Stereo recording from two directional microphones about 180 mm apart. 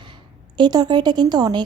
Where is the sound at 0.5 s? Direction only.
25° right (ahead or behind).